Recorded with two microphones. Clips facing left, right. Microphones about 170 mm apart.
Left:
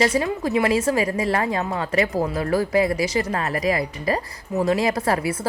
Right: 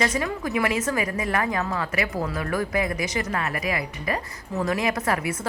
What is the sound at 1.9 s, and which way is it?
Speech, 35° left (ahead or behind).